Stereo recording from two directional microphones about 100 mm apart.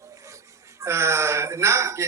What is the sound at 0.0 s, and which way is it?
Speech, 30° right (ahead or behind).